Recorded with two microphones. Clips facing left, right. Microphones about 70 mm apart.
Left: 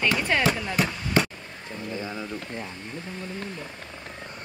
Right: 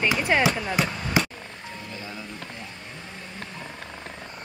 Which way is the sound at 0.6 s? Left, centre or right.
Centre.